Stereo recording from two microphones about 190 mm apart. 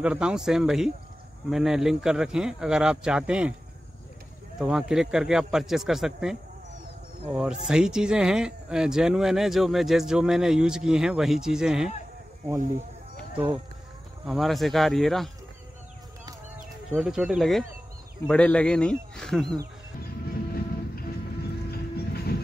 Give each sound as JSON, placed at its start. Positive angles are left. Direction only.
{"t": 0.0, "sound": "speech", "side_deg": -5}
{"t": 4.6, "sound": "speech", "side_deg": -5}
{"t": 7.3, "sound": "speech", "side_deg": -5}
{"t": 14.2, "sound": "speech", "side_deg": 0}
{"t": 16.9, "sound": "speech", "side_deg": -5}
{"t": 20.2, "sound": "train", "side_deg": 50}